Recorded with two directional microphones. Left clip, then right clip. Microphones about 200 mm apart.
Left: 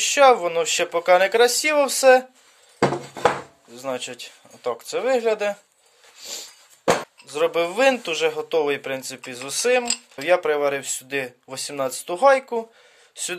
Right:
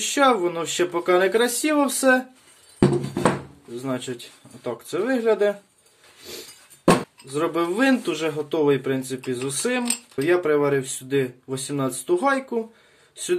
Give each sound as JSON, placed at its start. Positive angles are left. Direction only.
{"t": 0.0, "sound": "speech", "side_deg": 35}
{"t": 3.8, "sound": "speech", "side_deg": 35}
{"t": 7.3, "sound": "speech", "side_deg": 40}